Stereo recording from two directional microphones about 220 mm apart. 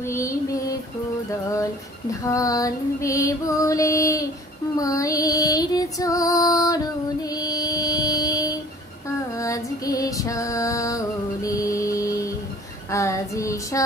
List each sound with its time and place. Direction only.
0.0 s female singing: 15° left (ahead or behind)
2.2 s female singing: 15° left (ahead or behind)
7.2 s mantra: 15° left (ahead or behind)
9.4 s female singing: 15° left (ahead or behind)